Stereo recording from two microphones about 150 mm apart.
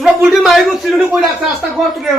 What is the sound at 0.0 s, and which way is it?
A man's voice, centre (ahead or behind).